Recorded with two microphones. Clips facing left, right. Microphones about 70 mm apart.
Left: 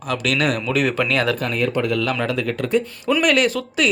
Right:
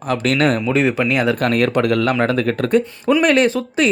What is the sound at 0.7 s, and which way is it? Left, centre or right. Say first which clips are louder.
Speech: right 3 dB; right.